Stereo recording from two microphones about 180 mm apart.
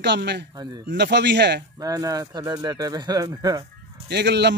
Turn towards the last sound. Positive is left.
turn(degrees=-70)  # may be behind; listen again after turning